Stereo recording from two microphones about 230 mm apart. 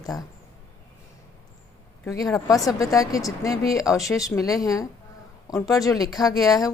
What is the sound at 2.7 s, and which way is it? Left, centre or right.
Speech, centre.